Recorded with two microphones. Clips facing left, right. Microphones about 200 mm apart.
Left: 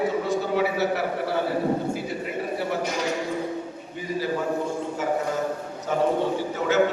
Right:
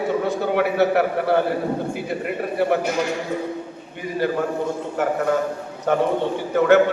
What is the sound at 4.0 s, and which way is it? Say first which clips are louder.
A man's voice: right 4 dB; 60° right (ahead or behind).